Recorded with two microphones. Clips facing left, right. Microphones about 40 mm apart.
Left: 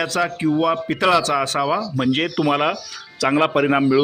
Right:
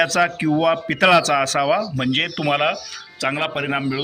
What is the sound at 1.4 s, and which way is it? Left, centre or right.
Speech, right.